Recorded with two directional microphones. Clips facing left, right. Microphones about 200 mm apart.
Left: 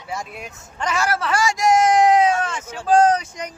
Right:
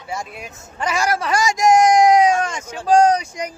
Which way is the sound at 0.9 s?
15° right (ahead or behind).